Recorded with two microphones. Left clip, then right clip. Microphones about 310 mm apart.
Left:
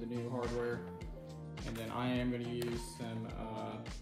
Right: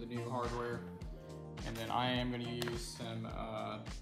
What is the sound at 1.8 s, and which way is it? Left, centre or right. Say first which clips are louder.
Speech: right 3 dB; right.